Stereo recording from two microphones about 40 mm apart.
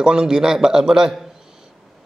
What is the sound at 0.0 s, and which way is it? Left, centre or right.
A man's voice, right.